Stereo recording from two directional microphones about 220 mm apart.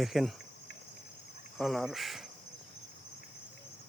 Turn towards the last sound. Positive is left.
turn(degrees=0)  # may be behind; listen again after turning